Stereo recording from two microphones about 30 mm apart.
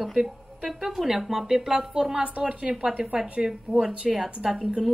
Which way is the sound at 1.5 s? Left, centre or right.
Centre.